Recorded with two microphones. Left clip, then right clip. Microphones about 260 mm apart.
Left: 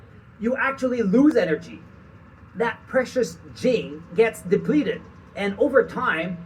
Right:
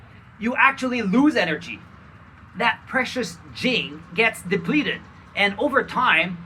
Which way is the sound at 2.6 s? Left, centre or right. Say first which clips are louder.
Right 2 dB; centre.